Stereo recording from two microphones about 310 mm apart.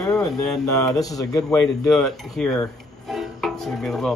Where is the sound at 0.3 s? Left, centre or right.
Centre.